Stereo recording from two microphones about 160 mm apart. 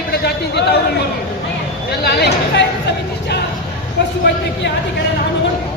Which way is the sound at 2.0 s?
90° left.